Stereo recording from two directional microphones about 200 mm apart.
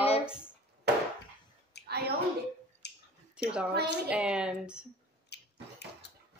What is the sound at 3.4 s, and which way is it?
A woman's voice, 5° right (ahead or behind).